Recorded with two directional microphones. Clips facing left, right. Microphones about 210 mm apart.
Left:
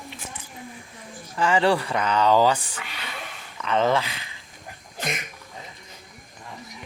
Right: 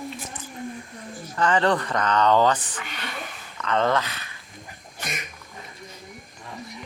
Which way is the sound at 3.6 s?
10° left (ahead or behind).